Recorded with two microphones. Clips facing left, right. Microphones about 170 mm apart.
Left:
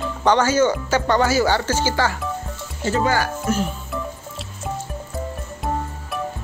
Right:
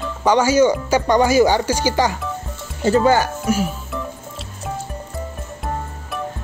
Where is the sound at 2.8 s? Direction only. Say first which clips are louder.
Right 5 dB; 25° right (ahead or behind).